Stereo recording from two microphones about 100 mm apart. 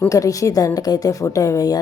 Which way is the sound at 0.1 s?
35° left (ahead or behind).